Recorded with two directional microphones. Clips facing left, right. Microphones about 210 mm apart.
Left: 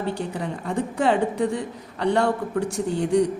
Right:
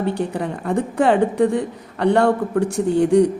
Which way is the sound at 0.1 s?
60° right (ahead or behind).